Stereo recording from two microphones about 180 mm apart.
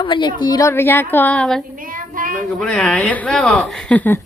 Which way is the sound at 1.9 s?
50° right (ahead or behind).